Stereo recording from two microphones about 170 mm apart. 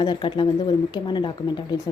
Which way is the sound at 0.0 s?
25° left (ahead or behind).